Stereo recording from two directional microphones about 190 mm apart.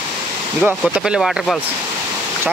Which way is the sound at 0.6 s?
5° right (ahead or behind).